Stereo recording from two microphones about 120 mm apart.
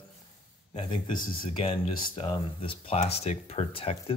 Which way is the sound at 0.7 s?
40° left (ahead or behind).